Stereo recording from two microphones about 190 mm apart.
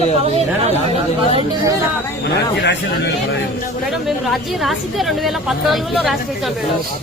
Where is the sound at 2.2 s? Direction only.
65° left (ahead or behind).